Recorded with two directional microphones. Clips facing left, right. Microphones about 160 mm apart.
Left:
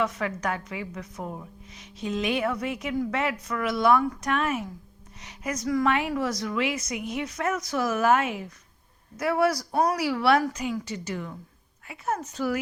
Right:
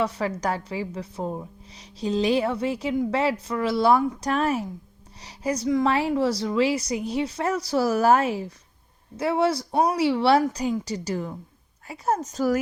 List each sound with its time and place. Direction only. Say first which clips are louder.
0.0 s a woman's voice: right 2 dB; 35° right (ahead or behind)